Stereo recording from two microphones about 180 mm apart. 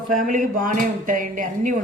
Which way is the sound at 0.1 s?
50° right (ahead or behind).